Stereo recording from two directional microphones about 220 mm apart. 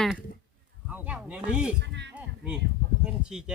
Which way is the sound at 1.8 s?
50° right (ahead or behind).